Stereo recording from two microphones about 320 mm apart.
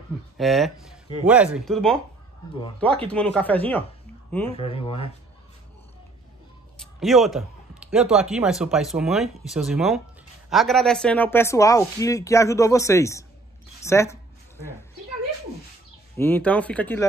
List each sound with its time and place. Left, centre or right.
0.4 s a man's voice: centre
3.1 s a man's voice: centre
4.5 s speech: centre
6.8 s a man's voice: centre
16.2 s a man's voice: centre